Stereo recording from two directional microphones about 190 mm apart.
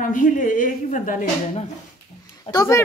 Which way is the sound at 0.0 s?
45° left (ahead or behind).